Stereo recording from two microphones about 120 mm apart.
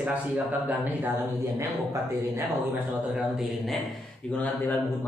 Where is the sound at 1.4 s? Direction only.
30° right (ahead or behind).